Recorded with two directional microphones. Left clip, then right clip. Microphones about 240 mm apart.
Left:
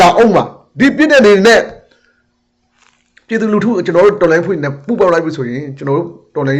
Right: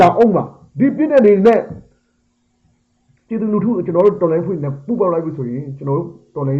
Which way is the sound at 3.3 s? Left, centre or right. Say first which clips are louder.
Left 5 dB; centre.